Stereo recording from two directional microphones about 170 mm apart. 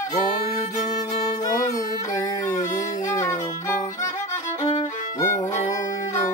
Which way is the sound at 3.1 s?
15° left (ahead or behind).